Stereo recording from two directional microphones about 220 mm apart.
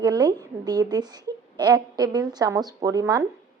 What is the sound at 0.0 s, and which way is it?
A woman's voice, 20° right (ahead or behind).